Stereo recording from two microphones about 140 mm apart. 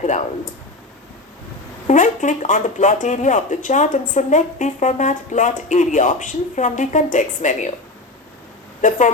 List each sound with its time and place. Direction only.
1.9 s speech: 60° left (ahead or behind)
8.8 s a woman's voice: 65° left (ahead or behind)